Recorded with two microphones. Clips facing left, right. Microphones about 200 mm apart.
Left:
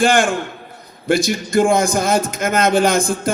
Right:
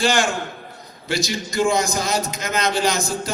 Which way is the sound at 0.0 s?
55° left (ahead or behind).